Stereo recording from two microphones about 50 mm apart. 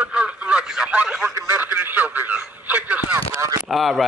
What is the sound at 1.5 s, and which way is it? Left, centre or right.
Radio, right.